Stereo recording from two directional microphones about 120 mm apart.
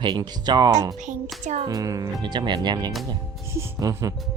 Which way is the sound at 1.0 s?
85° right.